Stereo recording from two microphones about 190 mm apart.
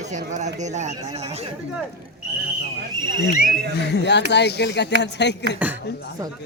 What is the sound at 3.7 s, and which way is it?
Speech, 65° left (ahead or behind).